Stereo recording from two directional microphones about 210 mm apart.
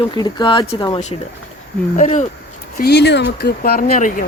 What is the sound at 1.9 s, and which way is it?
Speech, 35° left (ahead or behind).